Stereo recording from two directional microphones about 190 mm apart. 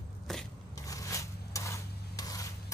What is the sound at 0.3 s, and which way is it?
Scrape, centre (ahead or behind).